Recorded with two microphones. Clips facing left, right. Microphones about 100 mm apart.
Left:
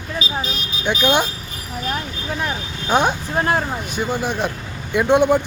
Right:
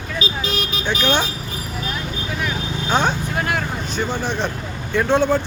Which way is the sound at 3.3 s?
30° left (ahead or behind).